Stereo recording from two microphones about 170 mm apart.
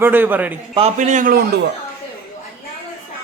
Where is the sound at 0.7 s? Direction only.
40° right (ahead or behind); by 1.5 s 55° right (ahead or behind).